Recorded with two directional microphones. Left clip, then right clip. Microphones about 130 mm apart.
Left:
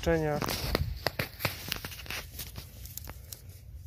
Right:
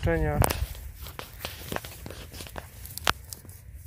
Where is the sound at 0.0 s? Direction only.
Centre (ahead or behind).